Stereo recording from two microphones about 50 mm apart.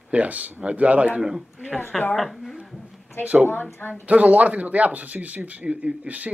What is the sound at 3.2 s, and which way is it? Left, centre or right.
Speech, right.